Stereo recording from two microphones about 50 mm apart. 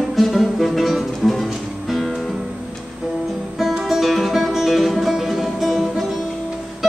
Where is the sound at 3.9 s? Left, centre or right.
Centre.